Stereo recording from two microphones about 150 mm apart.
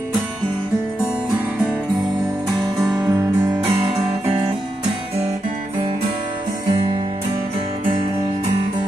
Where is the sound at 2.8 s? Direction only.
25° right (ahead or behind).